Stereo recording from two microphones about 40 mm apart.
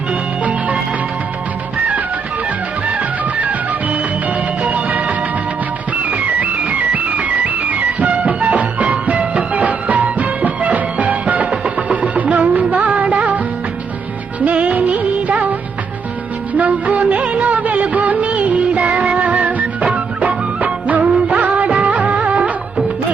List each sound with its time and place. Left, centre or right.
4.6 s music: right
14.4 s music: right
16.6 s music of bollywood: right